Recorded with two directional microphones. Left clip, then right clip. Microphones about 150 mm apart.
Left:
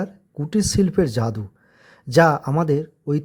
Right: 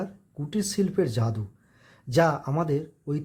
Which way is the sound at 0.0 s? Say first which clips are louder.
Left 6 dB; 45° left (ahead or behind).